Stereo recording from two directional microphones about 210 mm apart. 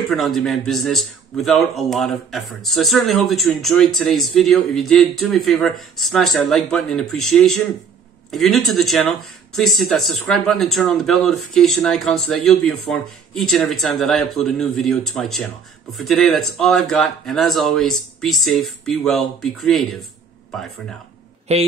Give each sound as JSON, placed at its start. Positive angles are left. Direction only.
{"t": 0.1, "sound": "a man's voice", "side_deg": 0}
{"t": 21.5, "sound": "a man's voice", "side_deg": -30}